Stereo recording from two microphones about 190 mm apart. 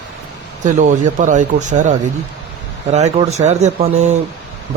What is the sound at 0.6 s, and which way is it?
Speech, 40° right (ahead or behind).